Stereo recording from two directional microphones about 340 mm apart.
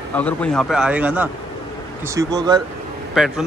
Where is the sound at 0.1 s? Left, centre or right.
Centre.